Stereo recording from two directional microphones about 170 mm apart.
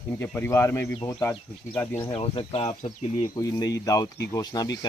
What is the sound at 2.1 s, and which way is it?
Speech, 35° left (ahead or behind).